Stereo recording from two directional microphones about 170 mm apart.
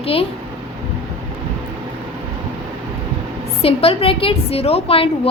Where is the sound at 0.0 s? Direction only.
35° left (ahead or behind).